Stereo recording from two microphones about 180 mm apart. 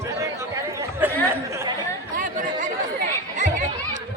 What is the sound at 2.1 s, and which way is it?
Chatter, 45° right (ahead or behind).